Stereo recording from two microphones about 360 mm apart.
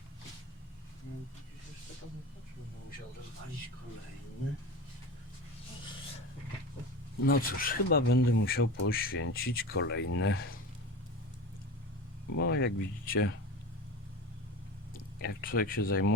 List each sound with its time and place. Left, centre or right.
7.3 s speech: left
12.4 s speech: left
15.2 s speech: left